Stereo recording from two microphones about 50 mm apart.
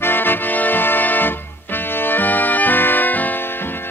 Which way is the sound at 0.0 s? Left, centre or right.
Left.